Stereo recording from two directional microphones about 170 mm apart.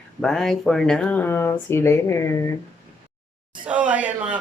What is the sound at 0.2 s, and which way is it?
Speech, 5° left (ahead or behind).